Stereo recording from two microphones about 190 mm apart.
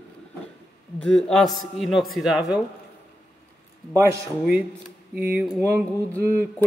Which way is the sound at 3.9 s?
15° right (ahead or behind).